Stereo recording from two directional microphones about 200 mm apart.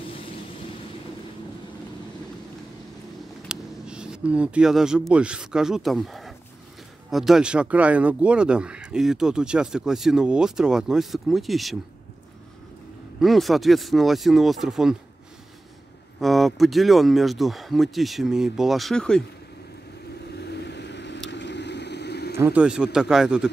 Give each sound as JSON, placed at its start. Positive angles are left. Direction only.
{"t": 3.4, "sound": "speech", "side_deg": -5}
{"t": 13.2, "sound": "speech", "side_deg": 0}
{"t": 16.2, "sound": "speech", "side_deg": 0}
{"t": 20.2, "sound": "vehicle", "side_deg": 55}
{"t": 22.4, "sound": "speech", "side_deg": -5}